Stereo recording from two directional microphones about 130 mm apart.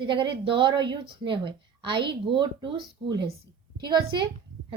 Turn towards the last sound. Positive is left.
turn(degrees=-35)  # may be behind; listen again after turning